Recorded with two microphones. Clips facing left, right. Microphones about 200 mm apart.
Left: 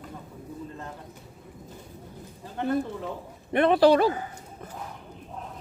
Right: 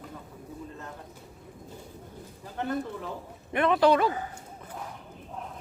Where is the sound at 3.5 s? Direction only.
35° left (ahead or behind).